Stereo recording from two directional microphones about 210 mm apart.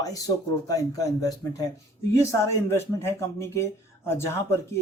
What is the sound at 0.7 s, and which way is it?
Speech, 15° left (ahead or behind).